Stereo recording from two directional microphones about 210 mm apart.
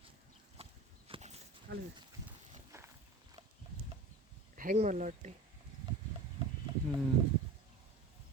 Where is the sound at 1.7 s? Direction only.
55° right (ahead or behind).